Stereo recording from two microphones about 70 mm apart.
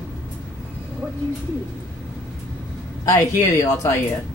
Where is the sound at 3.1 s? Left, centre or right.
Left.